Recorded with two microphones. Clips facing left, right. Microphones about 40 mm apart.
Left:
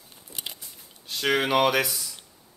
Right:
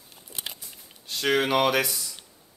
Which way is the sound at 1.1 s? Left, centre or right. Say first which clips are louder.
Even; centre.